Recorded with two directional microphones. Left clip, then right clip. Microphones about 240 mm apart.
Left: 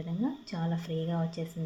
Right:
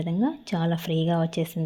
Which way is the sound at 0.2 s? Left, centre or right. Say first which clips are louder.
Right 7 dB; right.